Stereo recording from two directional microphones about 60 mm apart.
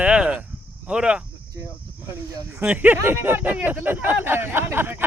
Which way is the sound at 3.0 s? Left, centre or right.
Right.